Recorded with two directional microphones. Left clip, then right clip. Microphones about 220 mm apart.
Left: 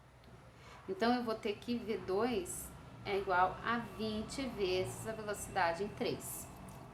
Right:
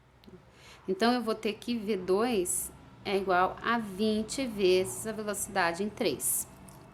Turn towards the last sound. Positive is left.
turn(degrees=-50)  # may be behind; listen again after turning